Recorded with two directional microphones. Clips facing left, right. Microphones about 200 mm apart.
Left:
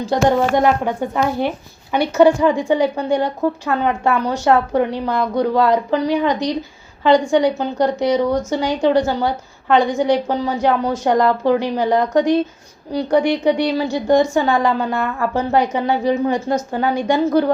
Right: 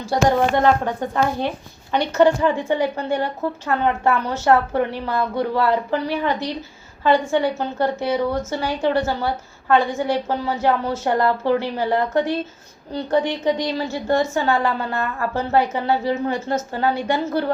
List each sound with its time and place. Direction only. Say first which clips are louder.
0.0 s a woman's voice: left 2 dB; 15° left (ahead or behind)